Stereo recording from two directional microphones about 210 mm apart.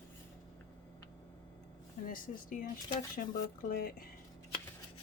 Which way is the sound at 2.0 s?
40° left (ahead or behind).